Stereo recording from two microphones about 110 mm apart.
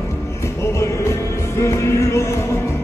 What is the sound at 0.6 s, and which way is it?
Music, 25° left (ahead or behind).